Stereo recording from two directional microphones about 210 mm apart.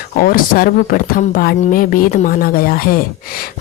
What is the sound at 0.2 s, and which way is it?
Speech, 45° left (ahead or behind).